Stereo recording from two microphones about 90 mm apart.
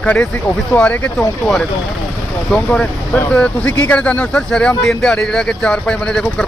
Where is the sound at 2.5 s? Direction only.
10° left (ahead or behind).